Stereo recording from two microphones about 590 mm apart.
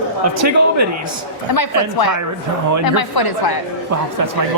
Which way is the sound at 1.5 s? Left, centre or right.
Left.